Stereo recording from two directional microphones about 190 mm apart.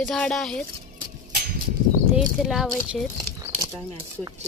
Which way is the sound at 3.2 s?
15° right (ahead or behind).